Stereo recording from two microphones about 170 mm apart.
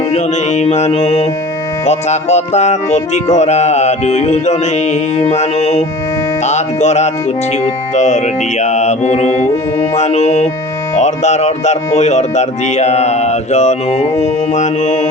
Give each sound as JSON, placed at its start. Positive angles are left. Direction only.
{"t": 0.1, "sound": "music", "side_deg": 40}